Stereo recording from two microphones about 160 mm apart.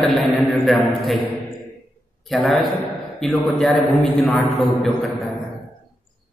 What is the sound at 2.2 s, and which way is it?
A man's voice, centre (ahead or behind).